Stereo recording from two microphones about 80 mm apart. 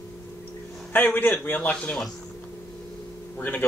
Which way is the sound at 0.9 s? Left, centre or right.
Left.